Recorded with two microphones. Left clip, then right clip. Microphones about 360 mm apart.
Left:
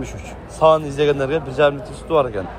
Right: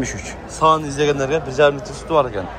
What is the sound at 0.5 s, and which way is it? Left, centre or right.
A man's voice, centre.